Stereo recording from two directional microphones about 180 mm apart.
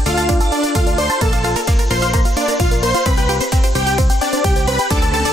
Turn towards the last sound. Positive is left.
turn(degrees=0)  # may be behind; listen again after turning